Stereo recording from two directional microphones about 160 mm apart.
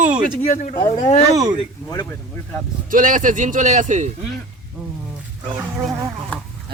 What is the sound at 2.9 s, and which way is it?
A man's voice, 55° right (ahead or behind).